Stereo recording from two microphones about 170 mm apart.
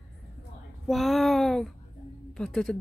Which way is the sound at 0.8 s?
Centre (ahead or behind).